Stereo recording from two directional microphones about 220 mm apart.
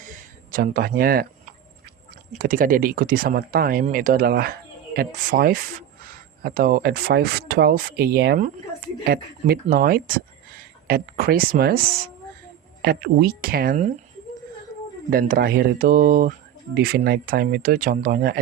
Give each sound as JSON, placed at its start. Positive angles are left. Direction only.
{"t": 0.0, "sound": "a sound", "side_deg": -40}
{"t": 2.0, "sound": "speech", "side_deg": -40}
{"t": 15.1, "sound": "speech", "side_deg": -45}